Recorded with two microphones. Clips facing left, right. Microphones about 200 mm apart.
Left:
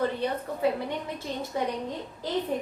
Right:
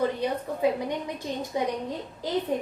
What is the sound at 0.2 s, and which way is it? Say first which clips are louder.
A woman's voice: right 2 dB; 15° right (ahead or behind).